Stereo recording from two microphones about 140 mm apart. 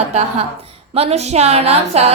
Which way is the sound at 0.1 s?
50° right (ahead or behind).